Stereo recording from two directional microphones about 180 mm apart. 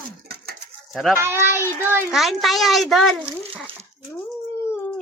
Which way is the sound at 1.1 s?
15° right (ahead or behind).